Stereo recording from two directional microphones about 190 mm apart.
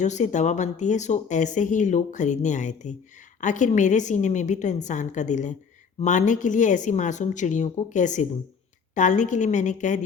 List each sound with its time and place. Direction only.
0.0 s speech: 40° left (ahead or behind)